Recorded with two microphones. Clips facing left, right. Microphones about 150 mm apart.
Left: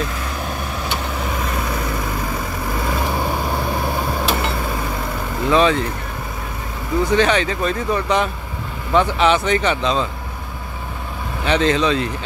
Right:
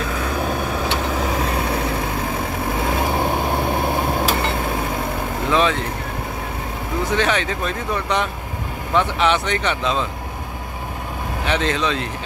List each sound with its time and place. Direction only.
2.9 s vehicle: 20° right (ahead or behind)
5.5 s speech: centre (ahead or behind)
7.1 s speech: centre (ahead or behind)
11.4 s speech: centre (ahead or behind)